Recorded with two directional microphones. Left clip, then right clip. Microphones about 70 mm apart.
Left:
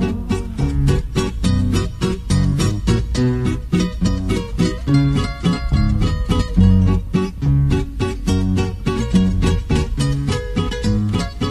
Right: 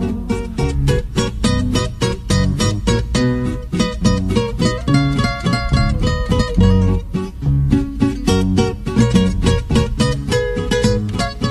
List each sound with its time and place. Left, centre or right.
0.6 s music: right
2.3 s music: right
3.7 s music: right
4.3 s music: centre
4.8 s music: right
6.7 s music: right
8.5 s music: right
10.4 s music: right